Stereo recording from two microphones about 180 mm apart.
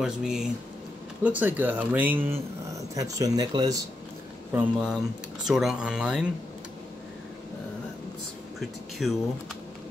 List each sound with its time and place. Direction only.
0.0 s speech: 5° right (ahead or behind); by 3.8 s 20° right (ahead or behind)
4.5 s speech: 10° right (ahead or behind)
8.5 s speech: centre (ahead or behind)